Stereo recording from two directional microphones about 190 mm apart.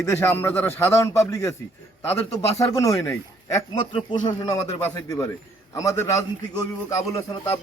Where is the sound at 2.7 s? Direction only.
20° left (ahead or behind).